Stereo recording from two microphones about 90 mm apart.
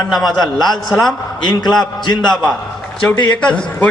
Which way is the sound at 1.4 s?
55° left (ahead or behind).